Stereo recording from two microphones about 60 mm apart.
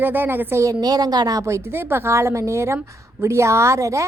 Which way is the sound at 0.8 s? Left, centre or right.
Right.